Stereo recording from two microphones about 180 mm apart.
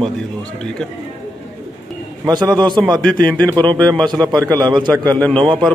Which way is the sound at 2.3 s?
20° right (ahead or behind).